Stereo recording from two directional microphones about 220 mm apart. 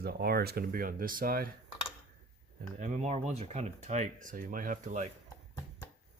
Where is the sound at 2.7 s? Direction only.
35° right (ahead or behind).